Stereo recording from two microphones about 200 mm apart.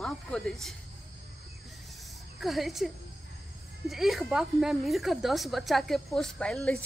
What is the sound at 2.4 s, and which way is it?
Speech, centre (ahead or behind).